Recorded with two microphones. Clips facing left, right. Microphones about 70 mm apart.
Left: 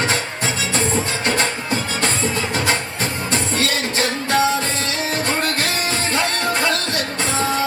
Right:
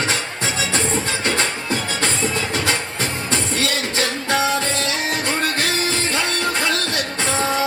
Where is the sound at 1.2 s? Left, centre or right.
Left.